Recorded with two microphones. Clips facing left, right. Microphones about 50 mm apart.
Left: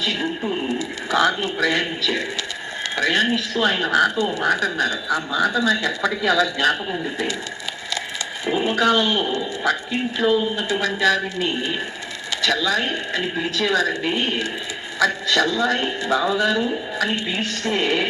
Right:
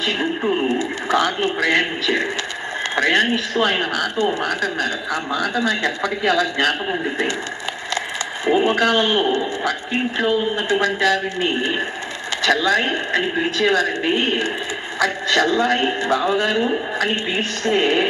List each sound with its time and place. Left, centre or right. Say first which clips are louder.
0.0 s a woman's voice: right 3 dB; right
8.4 s a woman's voice: right 2 dB; right